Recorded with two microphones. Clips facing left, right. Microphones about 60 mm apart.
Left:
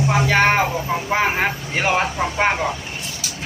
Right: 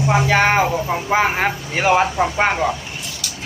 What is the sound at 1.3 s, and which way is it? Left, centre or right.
Speech, centre.